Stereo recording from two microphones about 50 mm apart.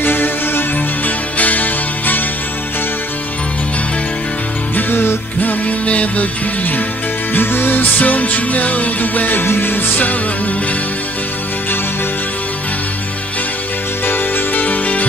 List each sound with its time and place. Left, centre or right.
0.0 s music: left
4.7 s music: left
7.3 s music: left
14.0 s music: left